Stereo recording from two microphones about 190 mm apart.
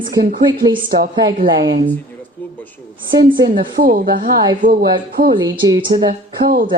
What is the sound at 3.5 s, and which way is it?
Speech, 50° right (ahead or behind).